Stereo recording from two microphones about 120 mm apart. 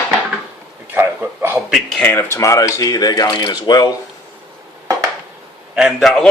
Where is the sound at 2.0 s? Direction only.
20° left (ahead or behind); by 3.9 s 35° left (ahead or behind).